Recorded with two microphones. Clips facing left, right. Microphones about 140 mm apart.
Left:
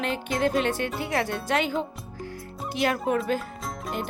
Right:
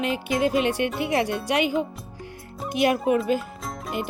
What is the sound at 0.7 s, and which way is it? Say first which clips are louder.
Speech: right 4 dB; 15° right (ahead or behind).